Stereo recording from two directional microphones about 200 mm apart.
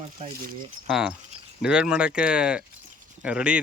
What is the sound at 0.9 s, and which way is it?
Speech, centre (ahead or behind).